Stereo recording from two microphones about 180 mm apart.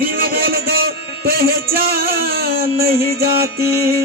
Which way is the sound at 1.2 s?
60° right (ahead or behind).